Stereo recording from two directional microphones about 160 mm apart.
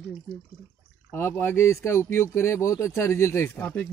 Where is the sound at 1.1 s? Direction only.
15° left (ahead or behind).